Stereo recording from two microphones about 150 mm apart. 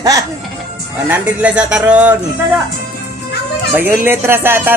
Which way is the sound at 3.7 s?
15° right (ahead or behind).